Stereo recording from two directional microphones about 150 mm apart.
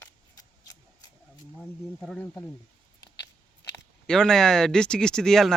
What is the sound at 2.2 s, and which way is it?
Speech, 20° left (ahead or behind).